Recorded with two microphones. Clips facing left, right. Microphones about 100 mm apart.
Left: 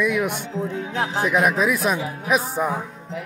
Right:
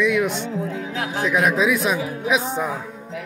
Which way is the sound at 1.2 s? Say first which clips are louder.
Right 1 dB; 5° left (ahead or behind).